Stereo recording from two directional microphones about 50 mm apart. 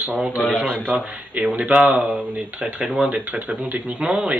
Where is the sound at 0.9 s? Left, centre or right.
Right.